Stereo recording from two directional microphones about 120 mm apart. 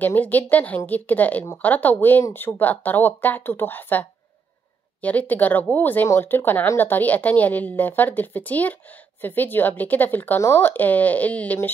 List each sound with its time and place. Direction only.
0.0 s speech: 15° left (ahead or behind)
5.0 s speech: 15° left (ahead or behind)